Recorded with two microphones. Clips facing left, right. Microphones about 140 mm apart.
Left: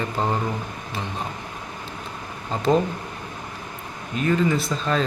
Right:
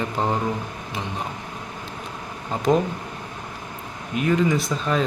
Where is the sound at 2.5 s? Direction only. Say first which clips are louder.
Right 1 dB; 10° right (ahead or behind).